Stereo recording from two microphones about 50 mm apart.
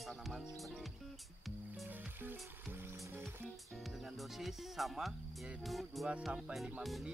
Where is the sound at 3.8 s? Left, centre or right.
Centre.